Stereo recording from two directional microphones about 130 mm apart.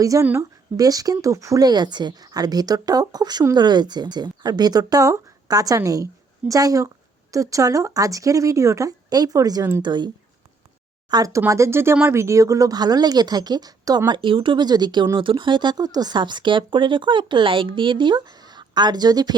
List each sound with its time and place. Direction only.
0.0 s speech: 25° right (ahead or behind)
11.1 s speech: 25° right (ahead or behind)
14.1 s speech: 40° right (ahead or behind)